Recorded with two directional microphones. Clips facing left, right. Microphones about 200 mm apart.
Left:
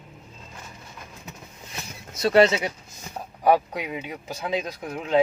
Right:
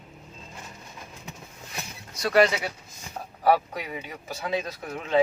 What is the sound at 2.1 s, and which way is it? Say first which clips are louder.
Speech: left 3 dB; 25° left (ahead or behind).